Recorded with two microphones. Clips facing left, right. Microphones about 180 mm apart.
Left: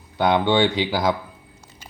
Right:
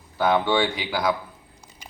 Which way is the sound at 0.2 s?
20° left (ahead or behind).